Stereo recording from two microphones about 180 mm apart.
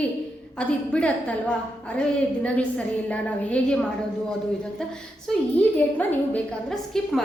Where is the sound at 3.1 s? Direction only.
5° left (ahead or behind).